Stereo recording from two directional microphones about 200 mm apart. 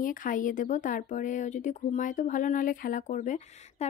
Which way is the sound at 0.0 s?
40° left (ahead or behind).